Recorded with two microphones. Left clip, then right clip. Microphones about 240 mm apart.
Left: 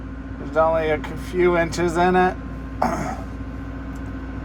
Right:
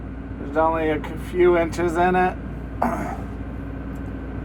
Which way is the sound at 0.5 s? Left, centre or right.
Left.